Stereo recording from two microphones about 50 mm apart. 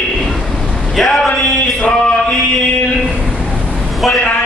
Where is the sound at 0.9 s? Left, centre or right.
Centre.